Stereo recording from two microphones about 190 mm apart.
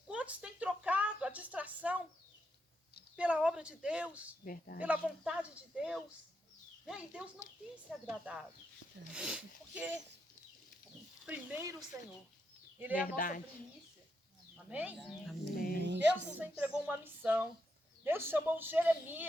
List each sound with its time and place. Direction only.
0.1 s a woman's voice: 5° right (ahead or behind)
3.2 s speech: 5° right (ahead or behind)
4.4 s speech: 45° left (ahead or behind)
4.8 s speech: 5° right (ahead or behind)
11.3 s a woman's voice: 15° right (ahead or behind)
13.0 s speech: 45° left (ahead or behind)
14.5 s speech: 5° right (ahead or behind)
15.5 s speech: 50° left (ahead or behind)
15.8 s speech: 65° right (ahead or behind)
16.1 s a woman's voice: 10° right (ahead or behind)